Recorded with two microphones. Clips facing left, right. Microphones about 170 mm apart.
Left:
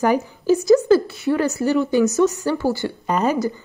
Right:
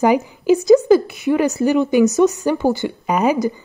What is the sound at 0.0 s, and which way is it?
Speech, 15° right (ahead or behind).